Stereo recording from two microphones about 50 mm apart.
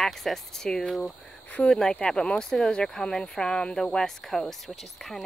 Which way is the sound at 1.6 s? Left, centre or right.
Centre.